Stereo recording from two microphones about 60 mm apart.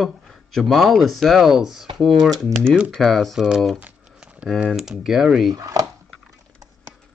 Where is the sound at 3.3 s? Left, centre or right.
Centre.